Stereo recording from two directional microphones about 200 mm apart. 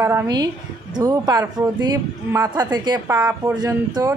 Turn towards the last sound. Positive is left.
turn(degrees=-20)  # may be behind; listen again after turning